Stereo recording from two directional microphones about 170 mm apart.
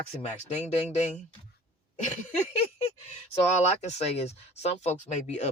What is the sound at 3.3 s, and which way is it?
Speech, 40° left (ahead or behind).